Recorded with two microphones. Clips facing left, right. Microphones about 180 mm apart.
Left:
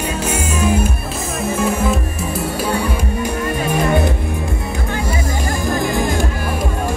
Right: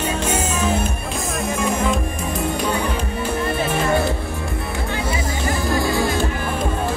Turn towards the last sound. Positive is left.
turn(degrees=20)  # may be behind; listen again after turning